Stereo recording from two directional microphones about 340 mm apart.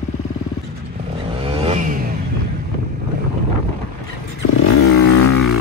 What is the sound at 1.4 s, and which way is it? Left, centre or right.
Vehicle, centre.